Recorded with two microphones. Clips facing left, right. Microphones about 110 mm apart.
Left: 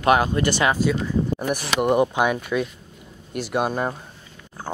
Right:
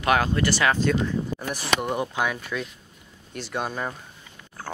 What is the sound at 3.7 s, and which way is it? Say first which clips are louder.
Speech: left 6 dB; 25° left (ahead or behind).